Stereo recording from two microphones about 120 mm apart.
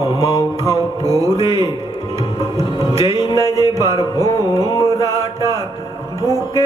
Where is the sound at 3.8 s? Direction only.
30° right (ahead or behind).